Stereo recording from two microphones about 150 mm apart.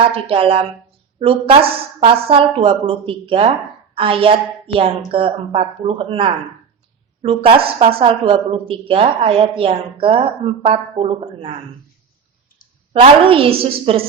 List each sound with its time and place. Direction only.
0.0 s a woman's voice: 40° right (ahead or behind)
12.9 s a woman's voice: 40° right (ahead or behind)